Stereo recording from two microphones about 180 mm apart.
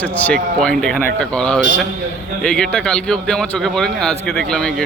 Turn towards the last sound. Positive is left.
turn(degrees=5)  # may be behind; listen again after turning